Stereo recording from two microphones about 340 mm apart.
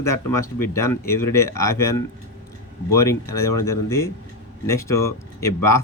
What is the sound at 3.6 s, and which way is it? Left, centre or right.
Speech, centre.